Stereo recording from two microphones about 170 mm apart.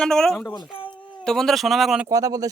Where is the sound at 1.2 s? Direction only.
5° left (ahead or behind).